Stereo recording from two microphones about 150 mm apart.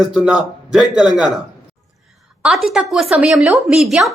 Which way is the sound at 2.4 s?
Centre (ahead or behind).